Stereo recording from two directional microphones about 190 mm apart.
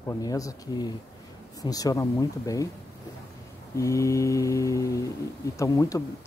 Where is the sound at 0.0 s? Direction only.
20° left (ahead or behind).